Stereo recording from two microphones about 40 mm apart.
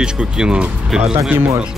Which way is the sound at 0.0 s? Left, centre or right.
Right.